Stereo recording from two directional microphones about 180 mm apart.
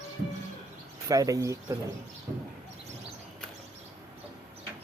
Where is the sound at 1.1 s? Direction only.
20° right (ahead or behind).